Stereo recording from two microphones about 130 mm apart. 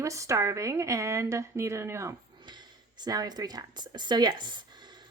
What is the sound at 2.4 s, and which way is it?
Speech, 35° right (ahead or behind).